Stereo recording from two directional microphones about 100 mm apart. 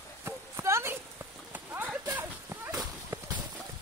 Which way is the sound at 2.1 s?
20° right (ahead or behind).